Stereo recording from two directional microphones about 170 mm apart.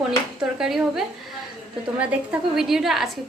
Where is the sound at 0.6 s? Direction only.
Centre (ahead or behind).